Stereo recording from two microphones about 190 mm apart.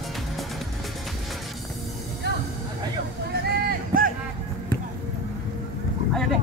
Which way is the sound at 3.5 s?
50° right (ahead or behind).